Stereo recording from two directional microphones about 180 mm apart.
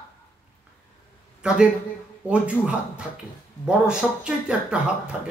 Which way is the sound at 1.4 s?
5° right (ahead or behind).